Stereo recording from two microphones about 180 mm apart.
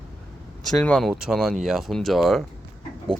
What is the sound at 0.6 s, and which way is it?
Speech, 5° left (ahead or behind).